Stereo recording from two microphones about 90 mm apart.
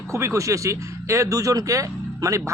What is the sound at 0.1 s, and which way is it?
Speech, 30° right (ahead or behind).